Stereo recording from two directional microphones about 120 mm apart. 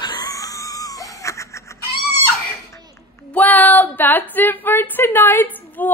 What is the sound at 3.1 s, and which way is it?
Female singing, 15° left (ahead or behind).